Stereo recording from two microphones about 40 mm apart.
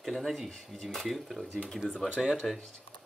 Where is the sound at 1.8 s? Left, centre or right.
Left.